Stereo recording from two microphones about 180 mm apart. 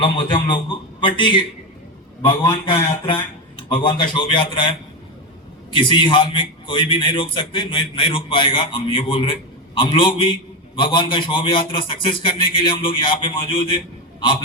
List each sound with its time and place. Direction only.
0.0 s a man's voice: 25° left (ahead or behind)
3.7 s a man's voice: 25° left (ahead or behind)
5.7 s a man's voice: 25° left (ahead or behind)